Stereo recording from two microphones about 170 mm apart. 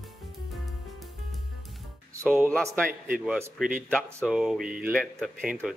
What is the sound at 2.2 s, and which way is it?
Speech, 15° right (ahead or behind).